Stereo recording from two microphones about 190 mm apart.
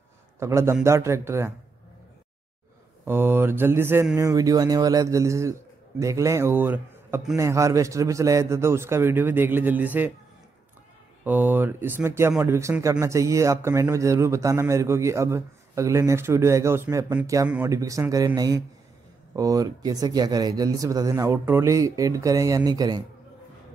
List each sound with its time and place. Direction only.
0.4 s speech: 15° right (ahead or behind)
3.1 s speech: 10° right (ahead or behind)
11.2 s speech: 10° right (ahead or behind)